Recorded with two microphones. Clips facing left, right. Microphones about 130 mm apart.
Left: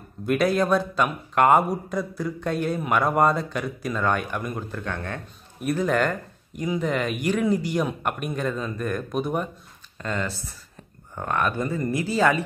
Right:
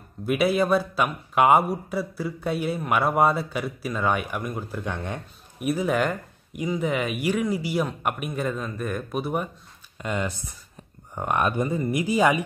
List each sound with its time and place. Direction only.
0.3 s a man's voice: 5° right (ahead or behind)